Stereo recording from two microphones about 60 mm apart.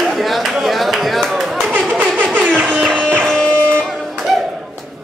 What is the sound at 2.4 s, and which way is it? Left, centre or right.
Music, right.